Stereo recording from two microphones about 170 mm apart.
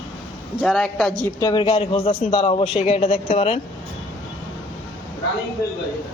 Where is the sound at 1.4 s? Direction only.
25° left (ahead or behind).